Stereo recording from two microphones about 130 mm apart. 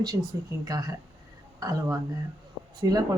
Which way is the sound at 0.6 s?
30° right (ahead or behind).